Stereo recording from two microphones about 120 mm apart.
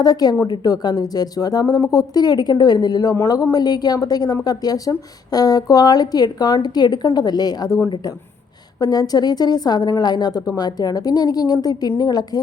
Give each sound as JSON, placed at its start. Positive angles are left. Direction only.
{"t": 0.0, "sound": "speech", "side_deg": 35}
{"t": 8.8, "sound": "speech", "side_deg": 35}